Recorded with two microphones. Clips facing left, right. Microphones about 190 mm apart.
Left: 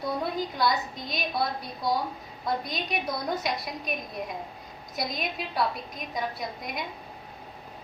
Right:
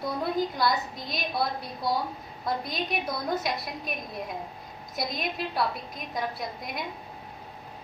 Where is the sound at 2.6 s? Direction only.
Centre (ahead or behind).